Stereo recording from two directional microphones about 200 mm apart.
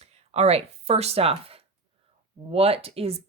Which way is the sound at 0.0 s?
30° right (ahead or behind).